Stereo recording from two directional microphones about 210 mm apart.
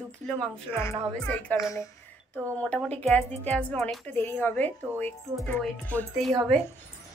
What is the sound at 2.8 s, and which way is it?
Speech, 5° left (ahead or behind).